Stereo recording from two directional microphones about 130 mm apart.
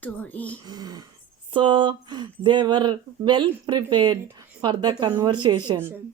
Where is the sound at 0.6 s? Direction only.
30° right (ahead or behind).